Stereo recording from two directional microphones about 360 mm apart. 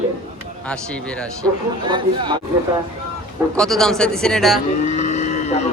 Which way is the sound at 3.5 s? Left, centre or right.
Centre.